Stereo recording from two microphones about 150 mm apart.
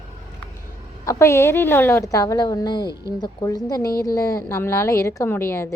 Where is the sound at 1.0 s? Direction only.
20° left (ahead or behind).